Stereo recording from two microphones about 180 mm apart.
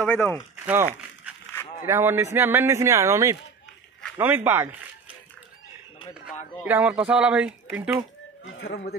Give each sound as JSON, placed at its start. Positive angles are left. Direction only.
{"t": 0.0, "sound": "speech", "side_deg": 10}
{"t": 0.7, "sound": "a sound", "side_deg": -10}
{"t": 1.9, "sound": "speech", "side_deg": -15}
{"t": 6.6, "sound": "speech", "side_deg": -10}
{"t": 8.5, "sound": "speech", "side_deg": 75}